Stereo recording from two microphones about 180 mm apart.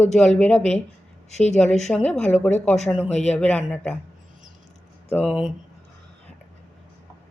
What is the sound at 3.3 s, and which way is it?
Speech, 10° left (ahead or behind).